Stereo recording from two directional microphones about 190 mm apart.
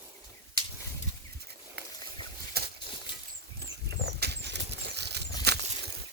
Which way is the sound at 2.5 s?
55° right (ahead or behind).